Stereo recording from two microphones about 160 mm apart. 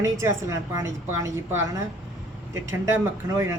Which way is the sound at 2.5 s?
15° right (ahead or behind).